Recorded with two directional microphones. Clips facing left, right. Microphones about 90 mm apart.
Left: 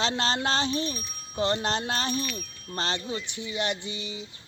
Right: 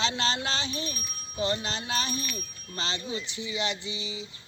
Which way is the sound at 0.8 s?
35° left (ahead or behind).